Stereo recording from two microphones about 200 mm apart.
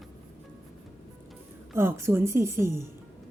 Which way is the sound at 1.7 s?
15° right (ahead or behind).